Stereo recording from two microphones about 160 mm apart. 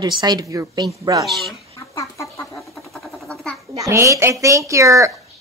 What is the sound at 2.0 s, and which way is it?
Chicken, 20° left (ahead or behind).